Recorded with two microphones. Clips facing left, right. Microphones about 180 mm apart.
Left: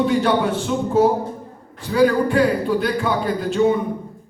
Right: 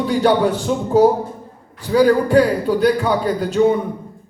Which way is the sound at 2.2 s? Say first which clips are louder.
Right 3 dB; 40° right (ahead or behind).